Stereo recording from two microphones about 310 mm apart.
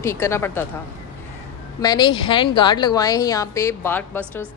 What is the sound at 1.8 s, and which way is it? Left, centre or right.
A woman's voice, centre.